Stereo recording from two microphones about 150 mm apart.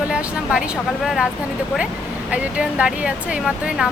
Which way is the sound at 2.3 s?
10° right (ahead or behind).